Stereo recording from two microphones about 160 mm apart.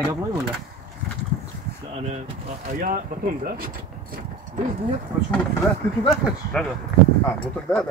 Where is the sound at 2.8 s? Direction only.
65° right (ahead or behind).